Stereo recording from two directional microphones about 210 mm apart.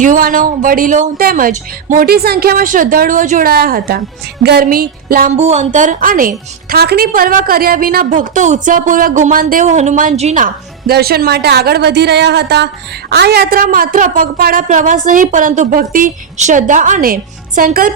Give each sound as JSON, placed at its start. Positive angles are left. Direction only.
{"t": 0.0, "sound": "a woman's voice", "side_deg": -40}